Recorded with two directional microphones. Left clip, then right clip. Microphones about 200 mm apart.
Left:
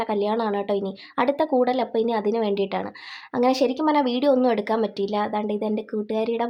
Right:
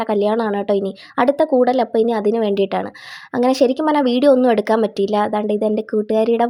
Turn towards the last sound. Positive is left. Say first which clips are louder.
# right 9 dB
turn(degrees=-30)  # may be behind; listen again after turning